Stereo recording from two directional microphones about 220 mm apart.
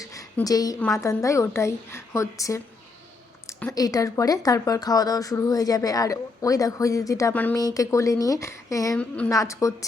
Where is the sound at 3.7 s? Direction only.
15° left (ahead or behind).